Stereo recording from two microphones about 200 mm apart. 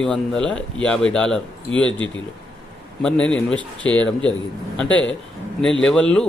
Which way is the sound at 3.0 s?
5° left (ahead or behind).